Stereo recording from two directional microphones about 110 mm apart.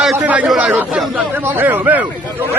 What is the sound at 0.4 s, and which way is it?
Speech, 10° right (ahead or behind).